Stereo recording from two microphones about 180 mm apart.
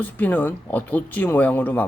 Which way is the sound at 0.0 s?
10° left (ahead or behind).